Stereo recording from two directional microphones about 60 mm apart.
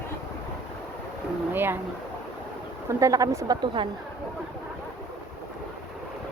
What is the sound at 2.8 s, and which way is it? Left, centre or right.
Speech, right.